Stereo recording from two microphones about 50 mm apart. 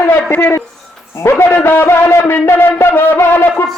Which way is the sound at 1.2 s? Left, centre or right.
Left.